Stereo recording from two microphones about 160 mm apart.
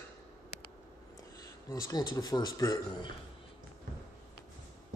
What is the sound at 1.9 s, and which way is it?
A man's voice, 25° left (ahead or behind).